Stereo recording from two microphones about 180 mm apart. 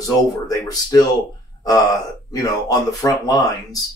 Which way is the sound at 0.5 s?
20° left (ahead or behind).